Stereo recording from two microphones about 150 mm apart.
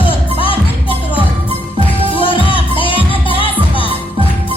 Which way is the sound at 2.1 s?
35° left (ahead or behind).